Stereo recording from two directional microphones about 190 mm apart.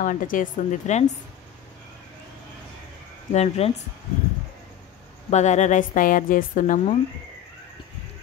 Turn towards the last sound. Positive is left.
turn(degrees=45)  # may be behind; listen again after turning